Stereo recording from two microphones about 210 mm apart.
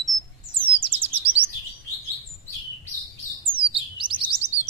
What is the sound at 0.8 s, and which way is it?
Chirp, 25° right (ahead or behind).